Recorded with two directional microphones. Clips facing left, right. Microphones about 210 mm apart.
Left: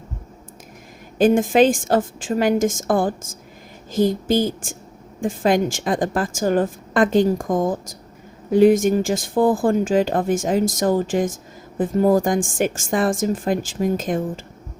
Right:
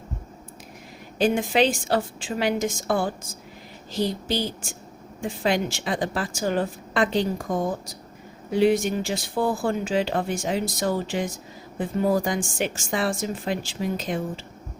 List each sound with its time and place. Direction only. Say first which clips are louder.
1.2 s speech: left 6 dB; 50° left (ahead or behind)